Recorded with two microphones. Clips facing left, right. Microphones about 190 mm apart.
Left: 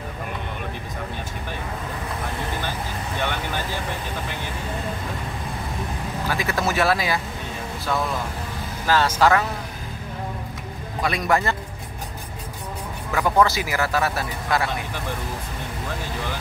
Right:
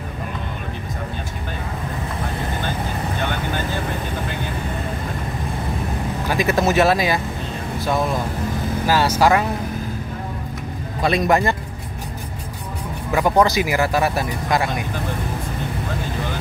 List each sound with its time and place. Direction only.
6.3 s speech: 20° right (ahead or behind)
8.8 s speech: 10° right (ahead or behind)
11.0 s speech: 25° right (ahead or behind)
13.1 s speech: 20° right (ahead or behind)